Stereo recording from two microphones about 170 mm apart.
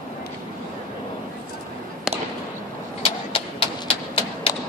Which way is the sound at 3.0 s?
30° left (ahead or behind).